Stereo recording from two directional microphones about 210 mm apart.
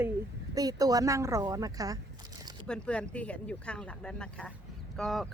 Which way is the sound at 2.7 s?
5° left (ahead or behind).